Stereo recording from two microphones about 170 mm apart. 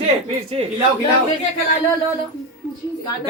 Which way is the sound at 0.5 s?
35° right (ahead or behind).